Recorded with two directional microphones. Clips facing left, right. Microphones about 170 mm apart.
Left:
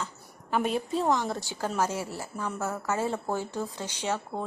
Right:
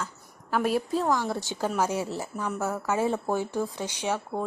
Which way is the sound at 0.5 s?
5° right (ahead or behind).